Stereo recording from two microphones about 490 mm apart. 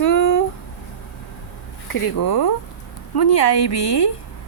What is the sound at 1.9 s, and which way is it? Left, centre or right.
Speech, left.